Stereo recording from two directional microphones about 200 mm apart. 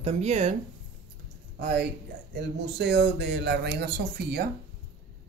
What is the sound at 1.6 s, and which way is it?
Speech, 55° right (ahead or behind).